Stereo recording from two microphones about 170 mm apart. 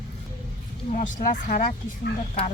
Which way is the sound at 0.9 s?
50° left (ahead or behind).